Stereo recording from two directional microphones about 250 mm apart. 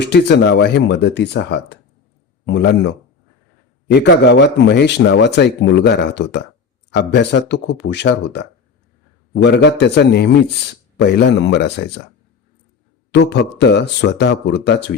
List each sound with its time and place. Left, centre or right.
0.0 s speech: left
3.9 s speech: left
13.1 s speech: left